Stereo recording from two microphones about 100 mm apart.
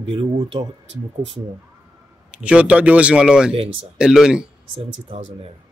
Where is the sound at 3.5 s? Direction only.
65° right (ahead or behind).